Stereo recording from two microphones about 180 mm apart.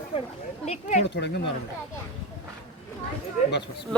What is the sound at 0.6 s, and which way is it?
Speech, 40° left (ahead or behind).